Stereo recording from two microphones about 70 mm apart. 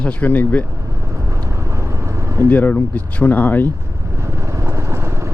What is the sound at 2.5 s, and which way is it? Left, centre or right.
Speech, left.